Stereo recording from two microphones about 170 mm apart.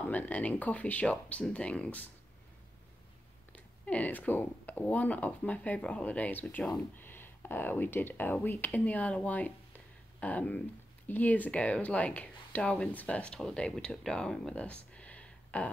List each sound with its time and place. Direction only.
0.0 s speech: 10° left (ahead or behind)
3.5 s speech: 5° left (ahead or behind)